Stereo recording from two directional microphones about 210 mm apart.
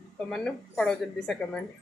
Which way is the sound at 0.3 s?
5° left (ahead or behind).